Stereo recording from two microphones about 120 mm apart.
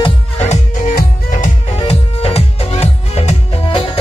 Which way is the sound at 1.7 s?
55° left (ahead or behind).